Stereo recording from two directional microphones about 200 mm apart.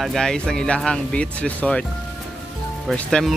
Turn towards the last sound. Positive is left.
turn(degrees=0)  # may be behind; listen again after turning